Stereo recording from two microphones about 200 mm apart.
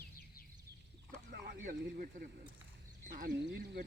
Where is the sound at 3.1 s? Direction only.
50° right (ahead or behind).